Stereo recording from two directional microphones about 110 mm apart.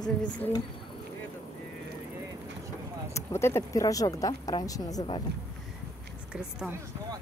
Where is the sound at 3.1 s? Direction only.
25° left (ahead or behind).